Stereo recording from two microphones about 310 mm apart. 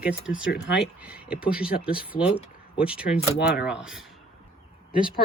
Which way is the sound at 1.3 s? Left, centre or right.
Left.